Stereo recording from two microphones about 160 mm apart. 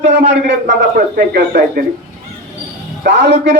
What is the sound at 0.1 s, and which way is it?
Speech, 90° right.